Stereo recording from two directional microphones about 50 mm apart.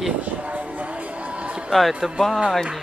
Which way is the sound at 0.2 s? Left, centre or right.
Right.